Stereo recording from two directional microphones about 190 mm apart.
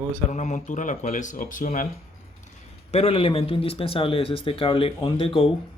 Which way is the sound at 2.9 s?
30° left (ahead or behind).